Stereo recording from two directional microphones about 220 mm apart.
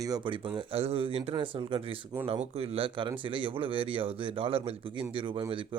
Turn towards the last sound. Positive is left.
turn(degrees=-25)  # may be behind; listen again after turning